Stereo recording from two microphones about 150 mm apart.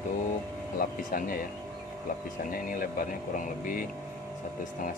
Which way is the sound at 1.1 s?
70° left (ahead or behind).